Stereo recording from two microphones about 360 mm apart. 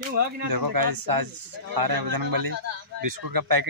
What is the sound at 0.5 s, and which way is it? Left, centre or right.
Speech, right.